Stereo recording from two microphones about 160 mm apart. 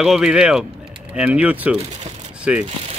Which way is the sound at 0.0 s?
5° right (ahead or behind).